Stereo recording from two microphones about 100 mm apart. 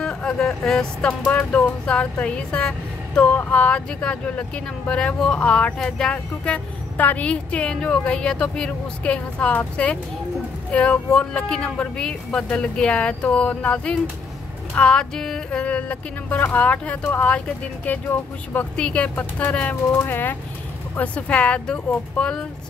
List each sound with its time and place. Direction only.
0.0 s speech: 10° left (ahead or behind)